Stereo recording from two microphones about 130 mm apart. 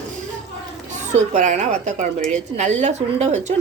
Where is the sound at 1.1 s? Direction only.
70° right (ahead or behind).